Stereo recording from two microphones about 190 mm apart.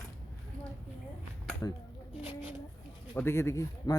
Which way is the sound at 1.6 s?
15° left (ahead or behind).